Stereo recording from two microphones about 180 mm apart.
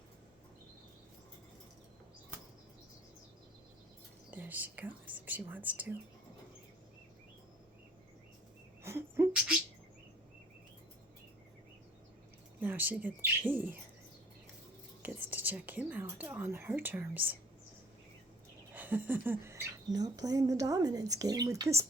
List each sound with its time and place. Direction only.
4.3 s speech: 10° right (ahead or behind)
8.8 s a sound: 15° right (ahead or behind)
12.5 s speech: 10° right (ahead or behind)
15.0 s speech: 10° right (ahead or behind)
18.7 s speech: 10° right (ahead or behind)